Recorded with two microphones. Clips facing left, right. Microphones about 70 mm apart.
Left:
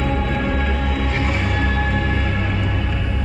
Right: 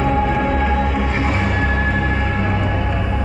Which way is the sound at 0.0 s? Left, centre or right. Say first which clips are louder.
Right 4 dB; centre.